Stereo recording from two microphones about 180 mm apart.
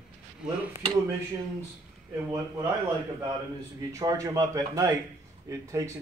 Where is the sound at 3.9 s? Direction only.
20° right (ahead or behind).